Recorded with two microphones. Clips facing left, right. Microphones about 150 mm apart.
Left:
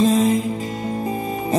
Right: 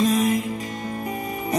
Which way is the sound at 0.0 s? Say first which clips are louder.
Left 4 dB; 30° left (ahead or behind).